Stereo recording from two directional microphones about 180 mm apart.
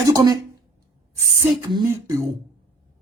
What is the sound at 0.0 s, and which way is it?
A woman's voice, 20° right (ahead or behind).